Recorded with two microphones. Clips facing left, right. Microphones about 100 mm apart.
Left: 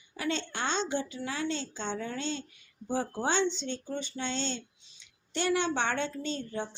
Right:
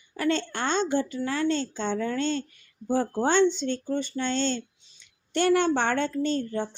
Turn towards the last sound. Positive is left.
turn(degrees=-45)  # may be behind; listen again after turning